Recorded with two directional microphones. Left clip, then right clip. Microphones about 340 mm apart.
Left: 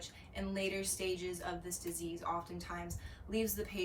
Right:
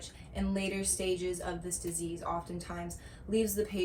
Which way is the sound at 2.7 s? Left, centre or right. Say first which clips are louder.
Right 2 dB; centre.